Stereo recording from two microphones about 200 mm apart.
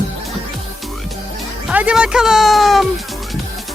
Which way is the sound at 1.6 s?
5° right (ahead or behind).